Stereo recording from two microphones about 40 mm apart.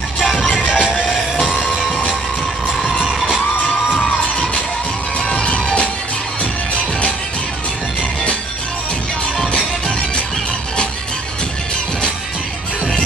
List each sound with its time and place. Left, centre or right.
0.6 s music: left
0.8 s music: centre
3.0 s children shouting: centre
5.3 s music: left
9.5 s music: centre